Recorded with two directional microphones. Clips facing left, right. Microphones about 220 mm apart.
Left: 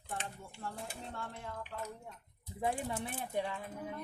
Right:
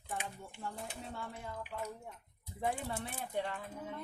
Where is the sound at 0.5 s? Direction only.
5° right (ahead or behind).